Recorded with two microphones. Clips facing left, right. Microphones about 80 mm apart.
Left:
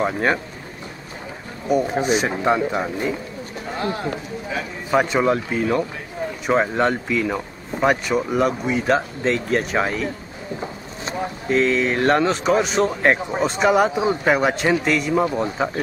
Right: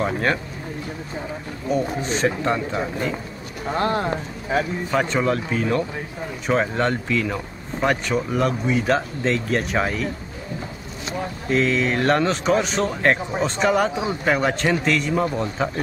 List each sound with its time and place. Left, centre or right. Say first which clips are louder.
0.0 s speech: left 2 dB; centre
2.0 s speech: left 3 dB; centre
3.7 s speech: right 4 dB; right
4.9 s speech: left 4 dB; centre
11.4 s speech: left 2 dB; centre